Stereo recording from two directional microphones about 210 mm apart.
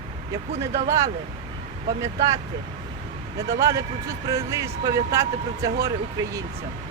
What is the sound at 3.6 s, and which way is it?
Speech, 15° right (ahead or behind).